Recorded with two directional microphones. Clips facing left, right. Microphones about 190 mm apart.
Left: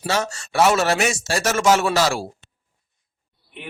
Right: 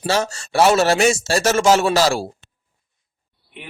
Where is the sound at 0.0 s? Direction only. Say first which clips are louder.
Right 3 dB; 30° right (ahead or behind).